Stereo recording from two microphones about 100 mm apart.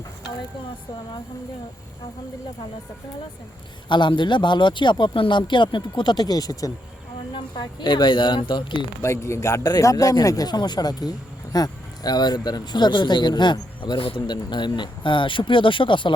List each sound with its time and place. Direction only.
3.8 s speech: 50° left (ahead or behind); by 6.7 s 35° left (ahead or behind)
7.3 s speech: 50° left (ahead or behind)
9.0 s speech: 30° left (ahead or behind); by 16.1 s 55° left (ahead or behind)